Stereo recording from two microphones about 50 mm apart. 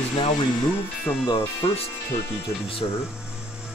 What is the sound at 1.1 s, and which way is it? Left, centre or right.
Speech, left.